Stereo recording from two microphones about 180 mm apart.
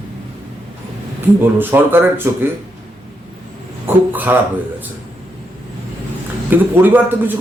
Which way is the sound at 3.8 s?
10° right (ahead or behind).